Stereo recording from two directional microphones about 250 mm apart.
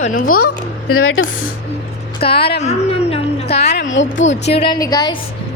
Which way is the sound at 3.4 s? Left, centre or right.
Left.